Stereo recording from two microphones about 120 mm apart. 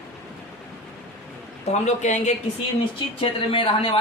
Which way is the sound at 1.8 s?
80° left.